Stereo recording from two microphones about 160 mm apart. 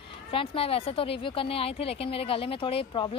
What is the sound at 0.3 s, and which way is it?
A woman's voice, 35° left (ahead or behind).